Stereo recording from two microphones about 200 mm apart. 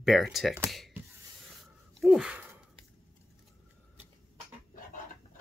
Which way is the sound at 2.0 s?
5° right (ahead or behind).